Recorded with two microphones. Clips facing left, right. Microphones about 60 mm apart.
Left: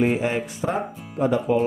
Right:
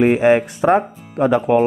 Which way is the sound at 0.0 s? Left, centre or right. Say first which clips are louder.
Right 9 dB; right.